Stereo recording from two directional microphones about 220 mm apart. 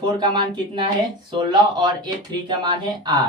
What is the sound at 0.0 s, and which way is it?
Speech, 20° right (ahead or behind).